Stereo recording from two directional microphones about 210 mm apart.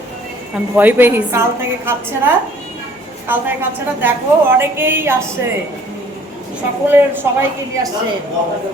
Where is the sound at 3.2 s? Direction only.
10° right (ahead or behind).